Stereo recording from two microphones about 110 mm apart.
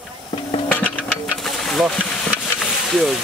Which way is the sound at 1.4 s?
5° left (ahead or behind).